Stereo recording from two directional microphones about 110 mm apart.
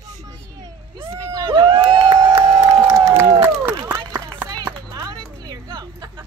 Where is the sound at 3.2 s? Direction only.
35° right (ahead or behind).